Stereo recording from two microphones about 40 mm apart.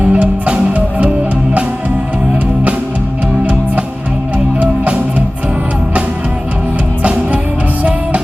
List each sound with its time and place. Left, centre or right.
0.0 s music: right